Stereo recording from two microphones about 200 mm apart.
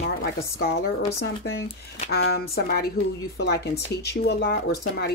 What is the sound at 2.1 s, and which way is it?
Speech, 50° left (ahead or behind).